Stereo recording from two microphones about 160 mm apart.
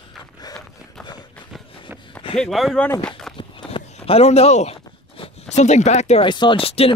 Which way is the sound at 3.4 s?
30° left (ahead or behind).